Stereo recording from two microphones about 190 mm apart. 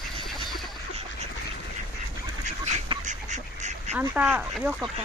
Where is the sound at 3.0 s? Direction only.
40° right (ahead or behind).